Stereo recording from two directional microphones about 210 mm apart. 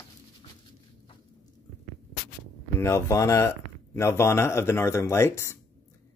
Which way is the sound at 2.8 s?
15° left (ahead or behind).